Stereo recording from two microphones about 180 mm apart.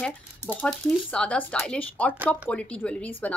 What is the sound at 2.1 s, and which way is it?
Speech, 10° right (ahead or behind).